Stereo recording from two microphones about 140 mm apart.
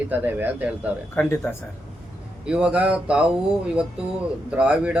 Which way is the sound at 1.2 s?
15° left (ahead or behind).